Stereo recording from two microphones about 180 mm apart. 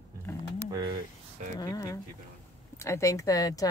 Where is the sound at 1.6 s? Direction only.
20° left (ahead or behind).